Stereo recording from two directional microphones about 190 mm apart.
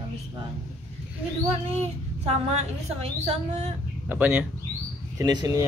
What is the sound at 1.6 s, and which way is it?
A woman's voice, 35° right (ahead or behind).